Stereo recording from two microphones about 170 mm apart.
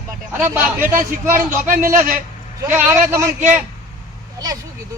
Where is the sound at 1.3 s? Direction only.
55° right (ahead or behind).